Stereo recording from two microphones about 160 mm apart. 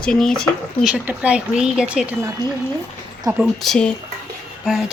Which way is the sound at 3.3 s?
Centre (ahead or behind).